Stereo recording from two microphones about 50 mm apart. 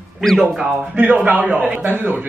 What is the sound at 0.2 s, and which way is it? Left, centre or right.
Speech, centre.